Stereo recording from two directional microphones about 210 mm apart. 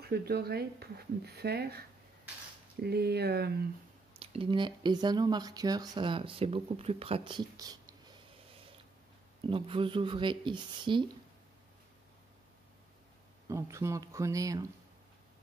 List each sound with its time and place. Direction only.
0.0 s speech: 50° right (ahead or behind)
2.8 s speech: 50° right (ahead or behind)
4.2 s speech: 25° right (ahead or behind)
9.5 s speech: 25° right (ahead or behind)
13.5 s speech: 15° right (ahead or behind)